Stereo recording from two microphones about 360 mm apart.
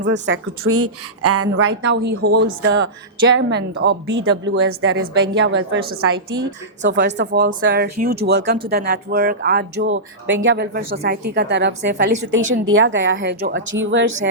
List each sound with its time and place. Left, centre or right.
0.0 s a woman's voice: right
6.1 s a woman's voice: right
6.8 s a woman's voice: right